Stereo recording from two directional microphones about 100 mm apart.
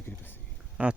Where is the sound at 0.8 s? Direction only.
15° right (ahead or behind).